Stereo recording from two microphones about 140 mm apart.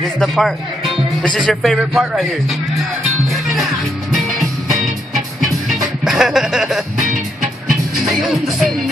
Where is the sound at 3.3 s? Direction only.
Centre (ahead or behind).